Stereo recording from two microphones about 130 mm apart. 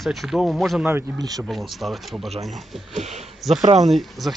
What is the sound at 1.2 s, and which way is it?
Speech, 30° right (ahead or behind).